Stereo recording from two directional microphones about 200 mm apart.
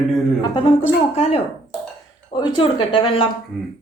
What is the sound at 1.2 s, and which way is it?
A woman's voice, 30° left (ahead or behind).